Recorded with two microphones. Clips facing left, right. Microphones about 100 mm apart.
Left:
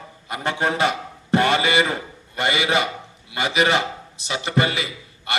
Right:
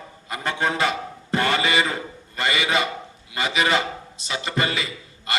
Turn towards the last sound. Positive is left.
turn(degrees=20)  # may be behind; listen again after turning